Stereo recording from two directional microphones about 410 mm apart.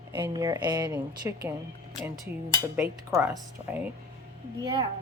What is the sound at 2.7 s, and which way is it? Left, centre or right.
A woman's voice, centre.